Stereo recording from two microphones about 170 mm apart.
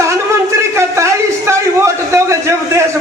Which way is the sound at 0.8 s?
15° right (ahead or behind).